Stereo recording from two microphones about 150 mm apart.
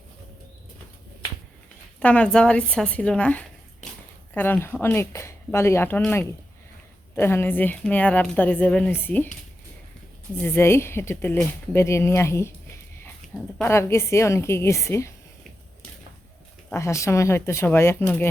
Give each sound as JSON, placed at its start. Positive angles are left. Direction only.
{"t": 2.0, "sound": "speech", "side_deg": 10}
{"t": 10.4, "sound": "speech", "side_deg": 15}
{"t": 13.6, "sound": "speech", "side_deg": 15}
{"t": 16.7, "sound": "speech", "side_deg": 20}